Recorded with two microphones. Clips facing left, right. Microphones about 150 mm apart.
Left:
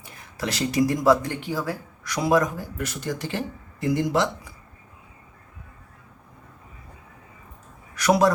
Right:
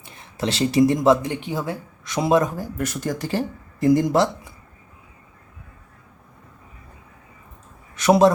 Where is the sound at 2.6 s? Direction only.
45° right (ahead or behind).